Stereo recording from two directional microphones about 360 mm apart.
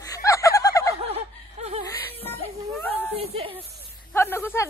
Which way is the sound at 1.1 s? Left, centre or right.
Centre.